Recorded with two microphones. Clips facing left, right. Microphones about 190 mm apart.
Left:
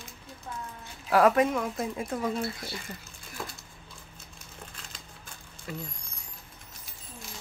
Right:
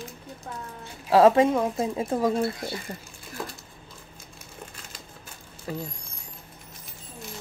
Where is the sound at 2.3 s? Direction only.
40° right (ahead or behind).